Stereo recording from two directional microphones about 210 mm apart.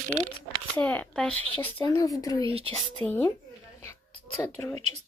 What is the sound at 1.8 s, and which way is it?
Speech, 15° left (ahead or behind).